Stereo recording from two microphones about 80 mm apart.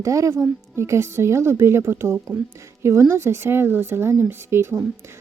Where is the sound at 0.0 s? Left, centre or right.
Right.